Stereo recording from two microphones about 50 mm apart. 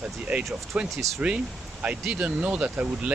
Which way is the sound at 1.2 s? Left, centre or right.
Right.